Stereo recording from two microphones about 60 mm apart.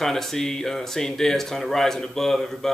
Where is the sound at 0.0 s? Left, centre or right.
Centre.